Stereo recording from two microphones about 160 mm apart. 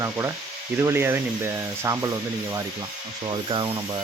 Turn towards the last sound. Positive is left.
turn(degrees=-30)  # may be behind; listen again after turning